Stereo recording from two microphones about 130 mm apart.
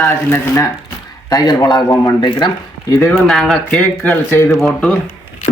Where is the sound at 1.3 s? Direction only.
30° left (ahead or behind).